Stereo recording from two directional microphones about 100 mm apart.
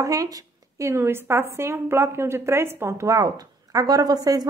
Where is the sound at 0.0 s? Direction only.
35° right (ahead or behind).